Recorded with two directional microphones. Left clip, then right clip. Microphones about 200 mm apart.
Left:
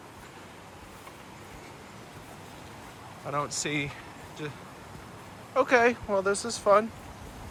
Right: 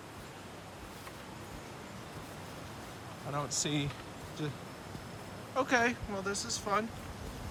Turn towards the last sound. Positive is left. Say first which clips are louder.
# left 11 dB
turn(degrees=-10)  # may be behind; listen again after turning